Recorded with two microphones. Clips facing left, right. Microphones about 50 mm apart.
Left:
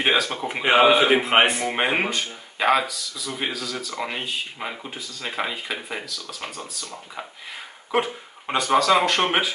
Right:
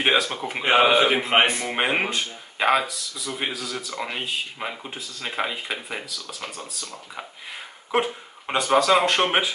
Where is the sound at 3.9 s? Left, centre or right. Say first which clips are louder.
Even; centre.